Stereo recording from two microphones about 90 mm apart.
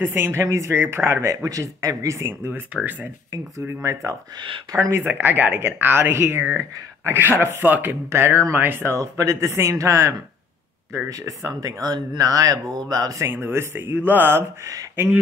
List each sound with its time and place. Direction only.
0.0 s speech: 25° right (ahead or behind)
3.6 s speech: 35° right (ahead or behind)
13.3 s speech: 25° right (ahead or behind)